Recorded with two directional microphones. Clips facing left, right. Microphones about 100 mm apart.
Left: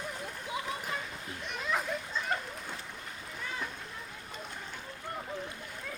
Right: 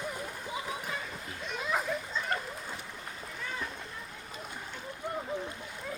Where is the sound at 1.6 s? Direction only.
5° right (ahead or behind).